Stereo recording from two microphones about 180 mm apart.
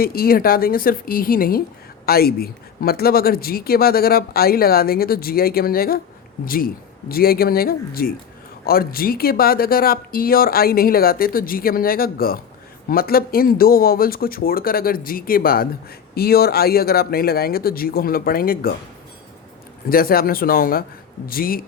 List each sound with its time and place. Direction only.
0.0 s a woman's voice: 55° left (ahead or behind)
19.9 s speech: 55° left (ahead or behind)